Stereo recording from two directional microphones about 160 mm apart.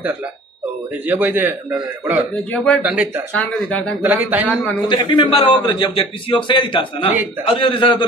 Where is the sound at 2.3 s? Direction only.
5° left (ahead or behind).